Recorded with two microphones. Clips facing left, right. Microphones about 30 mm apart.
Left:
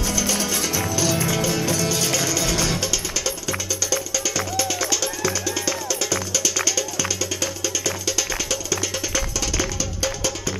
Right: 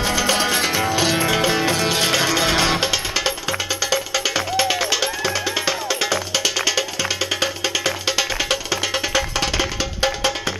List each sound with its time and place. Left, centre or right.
0.0 s music: right